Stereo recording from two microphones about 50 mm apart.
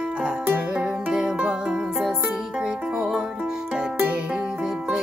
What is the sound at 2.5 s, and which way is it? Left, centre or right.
Music, centre.